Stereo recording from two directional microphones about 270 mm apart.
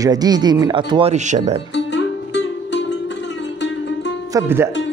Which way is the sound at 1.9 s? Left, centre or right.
Left.